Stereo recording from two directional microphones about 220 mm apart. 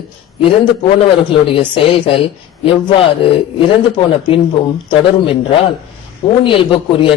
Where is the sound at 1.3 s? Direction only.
25° left (ahead or behind).